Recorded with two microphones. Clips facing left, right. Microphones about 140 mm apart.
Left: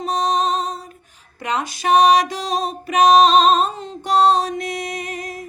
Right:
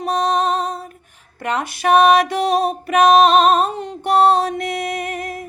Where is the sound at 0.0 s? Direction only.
60° right (ahead or behind).